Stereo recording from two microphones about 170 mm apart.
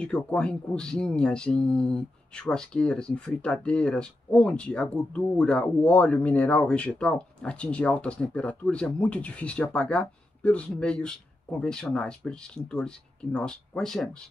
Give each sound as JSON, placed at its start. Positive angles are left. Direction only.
{"t": 0.0, "sound": "speech", "side_deg": 5}